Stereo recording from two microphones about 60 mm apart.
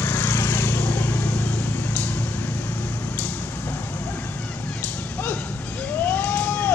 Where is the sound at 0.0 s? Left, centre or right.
Left.